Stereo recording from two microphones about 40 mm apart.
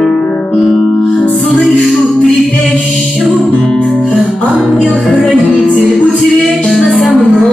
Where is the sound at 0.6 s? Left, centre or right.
Centre.